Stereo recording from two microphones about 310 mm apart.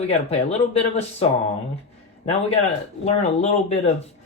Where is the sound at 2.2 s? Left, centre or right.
Left.